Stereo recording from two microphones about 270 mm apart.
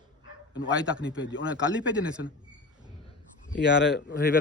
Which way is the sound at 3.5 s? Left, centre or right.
Left.